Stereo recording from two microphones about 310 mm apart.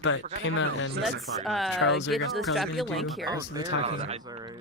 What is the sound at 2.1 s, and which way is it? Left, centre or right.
Speech, centre.